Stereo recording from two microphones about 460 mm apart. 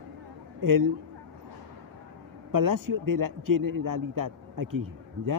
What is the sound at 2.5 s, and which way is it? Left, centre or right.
Speech, right.